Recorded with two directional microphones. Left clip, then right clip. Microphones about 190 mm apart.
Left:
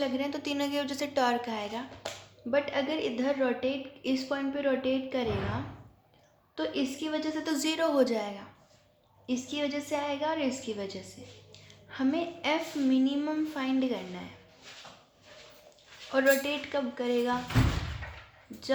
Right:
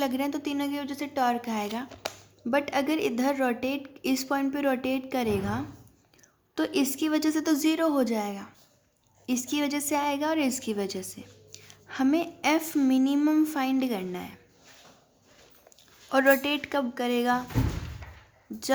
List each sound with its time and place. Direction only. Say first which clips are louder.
0.0 s a woman's voice: right 3 dB; 45° right (ahead or behind)
6.6 s a woman's voice: right 5 dB; 55° right (ahead or behind)
16.1 s a woman's voice: right 3 dB; 45° right (ahead or behind)